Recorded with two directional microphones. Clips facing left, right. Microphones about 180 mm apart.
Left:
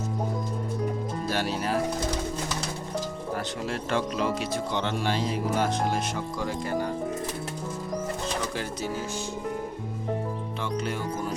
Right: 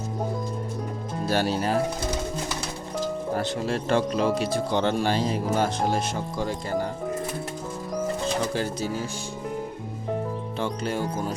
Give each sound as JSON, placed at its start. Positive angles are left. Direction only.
{"t": 1.3, "sound": "speech", "side_deg": -35}
{"t": 3.3, "sound": "speech", "side_deg": -30}
{"t": 10.6, "sound": "speech", "side_deg": -30}